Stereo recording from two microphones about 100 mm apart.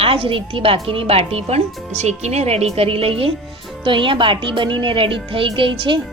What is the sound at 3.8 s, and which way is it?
A woman's voice, 55° right (ahead or behind).